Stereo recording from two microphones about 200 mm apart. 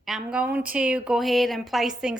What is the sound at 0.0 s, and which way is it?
A woman's voice, centre (ahead or behind).